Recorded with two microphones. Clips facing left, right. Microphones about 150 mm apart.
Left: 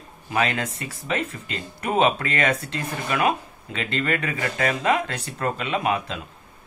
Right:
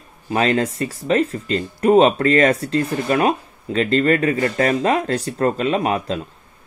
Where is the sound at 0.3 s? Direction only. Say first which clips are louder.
Right 6 dB; 35° right (ahead or behind).